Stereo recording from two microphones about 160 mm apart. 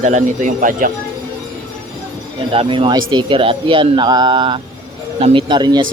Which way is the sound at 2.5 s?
35° right (ahead or behind).